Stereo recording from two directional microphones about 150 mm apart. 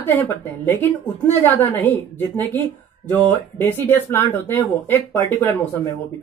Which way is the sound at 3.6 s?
15° left (ahead or behind).